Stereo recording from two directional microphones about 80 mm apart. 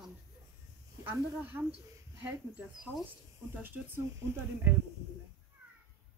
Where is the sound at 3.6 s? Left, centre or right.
Right.